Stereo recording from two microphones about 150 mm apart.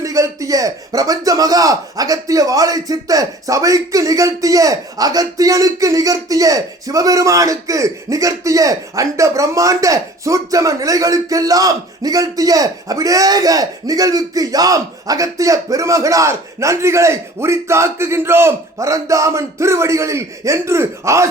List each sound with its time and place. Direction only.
0.0 s speech: 20° right (ahead or behind)